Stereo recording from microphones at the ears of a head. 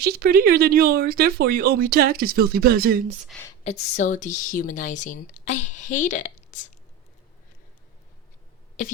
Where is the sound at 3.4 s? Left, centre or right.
Left.